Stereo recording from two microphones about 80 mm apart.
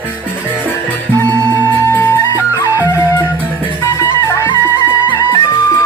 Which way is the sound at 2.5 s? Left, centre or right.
Left.